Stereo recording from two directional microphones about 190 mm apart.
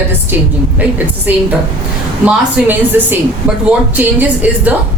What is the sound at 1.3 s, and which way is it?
Speech, 10° right (ahead or behind).